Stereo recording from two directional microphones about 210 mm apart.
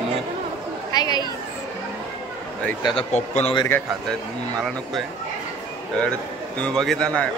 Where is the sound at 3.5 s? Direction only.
10° left (ahead or behind).